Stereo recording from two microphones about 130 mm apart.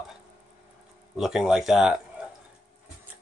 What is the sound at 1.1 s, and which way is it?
Speech, 5° right (ahead or behind).